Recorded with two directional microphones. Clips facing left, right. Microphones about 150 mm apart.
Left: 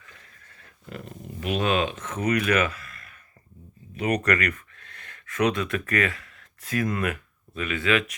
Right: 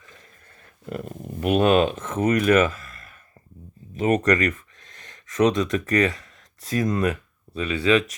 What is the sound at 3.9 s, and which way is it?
Speech, 40° right (ahead or behind).